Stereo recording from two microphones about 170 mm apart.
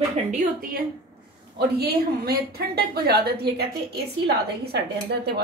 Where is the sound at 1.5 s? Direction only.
65° right (ahead or behind).